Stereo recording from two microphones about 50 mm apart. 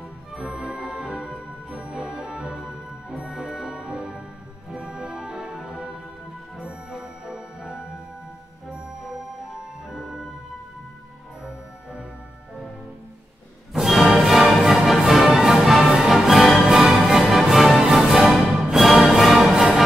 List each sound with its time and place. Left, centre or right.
0.4 s music: centre
9.8 s music: centre
13.7 s music: centre